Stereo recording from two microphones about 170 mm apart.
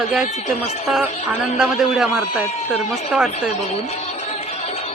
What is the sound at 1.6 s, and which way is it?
Speech, centre (ahead or behind).